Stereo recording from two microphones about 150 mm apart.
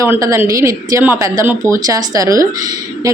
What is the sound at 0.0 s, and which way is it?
A woman's voice, 20° right (ahead or behind).